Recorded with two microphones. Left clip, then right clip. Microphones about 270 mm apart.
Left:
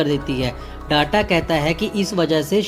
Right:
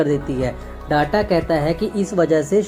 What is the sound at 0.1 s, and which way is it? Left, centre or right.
Speech, left.